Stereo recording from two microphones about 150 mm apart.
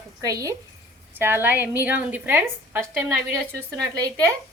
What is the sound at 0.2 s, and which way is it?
A woman's voice, 25° right (ahead or behind).